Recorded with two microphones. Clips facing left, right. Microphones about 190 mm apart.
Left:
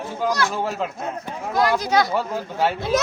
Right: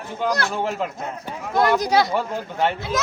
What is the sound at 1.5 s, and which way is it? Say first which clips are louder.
Speech: right 2 dB; 20° right (ahead or behind).